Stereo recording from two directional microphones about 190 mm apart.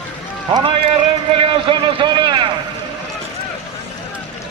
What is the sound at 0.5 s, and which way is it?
Speech, 25° right (ahead or behind).